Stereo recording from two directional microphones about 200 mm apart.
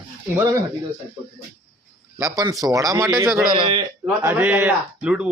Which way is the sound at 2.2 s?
15° right (ahead or behind).